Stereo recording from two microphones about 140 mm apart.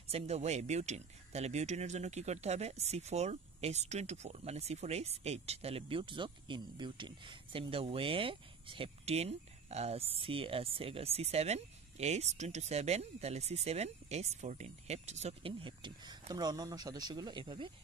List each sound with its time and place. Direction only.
0.1 s speech: 50° right (ahead or behind)
15.6 s speech: 35° right (ahead or behind)